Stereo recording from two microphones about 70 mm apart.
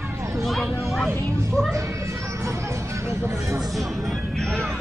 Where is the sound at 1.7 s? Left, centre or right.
Right.